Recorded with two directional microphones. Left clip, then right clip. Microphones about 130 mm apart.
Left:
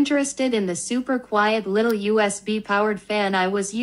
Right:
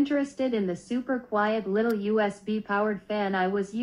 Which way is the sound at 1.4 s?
45° left (ahead or behind).